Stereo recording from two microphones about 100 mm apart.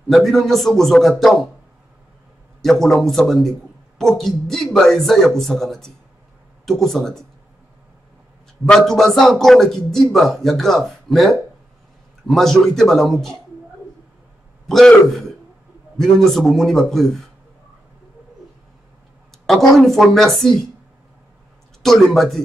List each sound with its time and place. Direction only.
0.1 s a man's voice: centre (ahead or behind)
2.6 s a man's voice: 5° left (ahead or behind)
8.6 s a man's voice: 5° left (ahead or behind)
14.7 s a man's voice: 5° left (ahead or behind)
19.4 s a man's voice: centre (ahead or behind)
21.8 s a man's voice: centre (ahead or behind)